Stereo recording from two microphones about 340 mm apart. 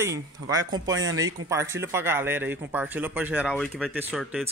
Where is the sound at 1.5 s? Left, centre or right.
Centre.